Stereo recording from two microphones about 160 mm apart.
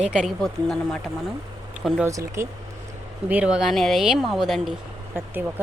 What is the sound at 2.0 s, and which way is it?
Speech, 20° right (ahead or behind).